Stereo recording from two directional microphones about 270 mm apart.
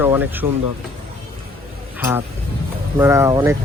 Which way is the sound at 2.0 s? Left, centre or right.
Centre.